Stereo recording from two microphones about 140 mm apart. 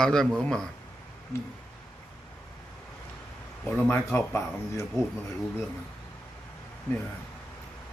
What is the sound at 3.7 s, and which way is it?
Speech, 15° left (ahead or behind).